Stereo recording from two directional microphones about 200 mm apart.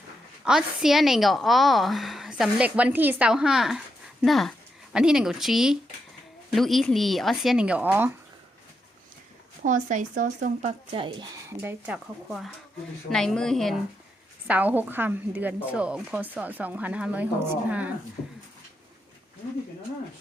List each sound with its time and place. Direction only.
0.4 s a woman's voice: centre (ahead or behind)
9.6 s speech: 40° right (ahead or behind)
11.4 s a woman's voice: 10° right (ahead or behind)